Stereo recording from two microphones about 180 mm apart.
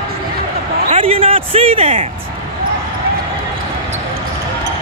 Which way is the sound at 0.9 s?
30° right (ahead or behind).